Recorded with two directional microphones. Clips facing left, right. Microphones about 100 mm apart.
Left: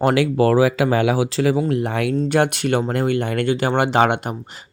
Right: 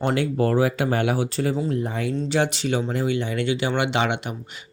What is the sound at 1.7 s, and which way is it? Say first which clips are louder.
Speech: left 5 dB; 75° left (ahead or behind).